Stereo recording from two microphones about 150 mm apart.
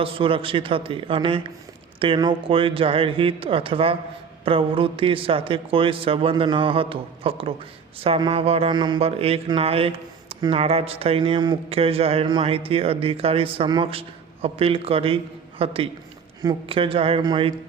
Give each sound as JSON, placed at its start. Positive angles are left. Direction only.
{"t": 0.0, "sound": "a man's voice", "side_deg": -35}
{"t": 8.7, "sound": "speech", "side_deg": -30}
{"t": 9.0, "sound": "a man's voice", "side_deg": -40}
{"t": 16.4, "sound": "speech", "side_deg": -25}
{"t": 16.7, "sound": "a man's voice", "side_deg": -35}